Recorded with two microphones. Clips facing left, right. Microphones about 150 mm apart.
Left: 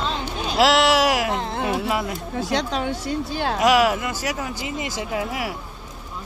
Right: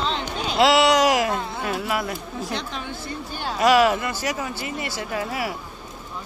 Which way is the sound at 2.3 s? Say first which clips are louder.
Left 6 dB; 90° left.